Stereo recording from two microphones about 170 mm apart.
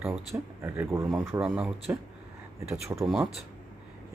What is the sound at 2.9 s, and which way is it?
Speech, 15° right (ahead or behind).